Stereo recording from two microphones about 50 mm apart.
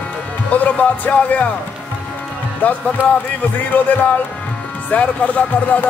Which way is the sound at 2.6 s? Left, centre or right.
Left.